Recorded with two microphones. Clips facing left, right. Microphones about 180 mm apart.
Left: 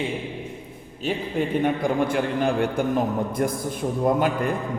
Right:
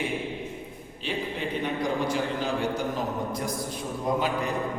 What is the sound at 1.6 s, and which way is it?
A man's voice, 55° left (ahead or behind).